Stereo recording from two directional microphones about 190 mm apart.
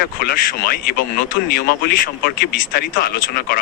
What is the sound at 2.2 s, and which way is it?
Speech, 50° left (ahead or behind).